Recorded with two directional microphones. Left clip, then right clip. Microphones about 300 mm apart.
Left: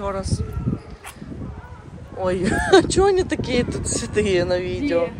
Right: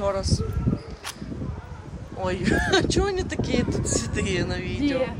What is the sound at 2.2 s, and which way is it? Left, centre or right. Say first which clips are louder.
Speech: left 3 dB; centre.